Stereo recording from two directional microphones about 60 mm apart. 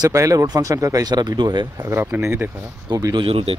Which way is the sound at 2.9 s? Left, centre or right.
Right.